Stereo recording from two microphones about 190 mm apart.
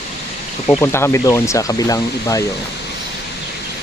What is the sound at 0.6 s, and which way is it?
Speech, 10° left (ahead or behind).